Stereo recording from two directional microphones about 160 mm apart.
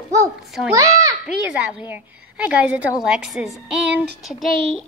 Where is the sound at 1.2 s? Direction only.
10° right (ahead or behind).